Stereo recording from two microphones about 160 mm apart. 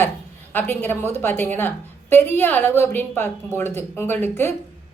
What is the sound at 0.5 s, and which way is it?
A woman's voice, 10° left (ahead or behind).